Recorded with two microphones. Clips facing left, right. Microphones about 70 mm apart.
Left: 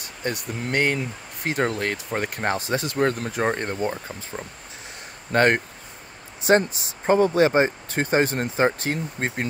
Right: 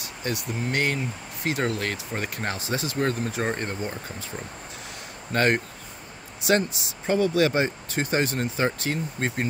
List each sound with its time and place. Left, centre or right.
0.0 s speech: left
5.3 s speech: left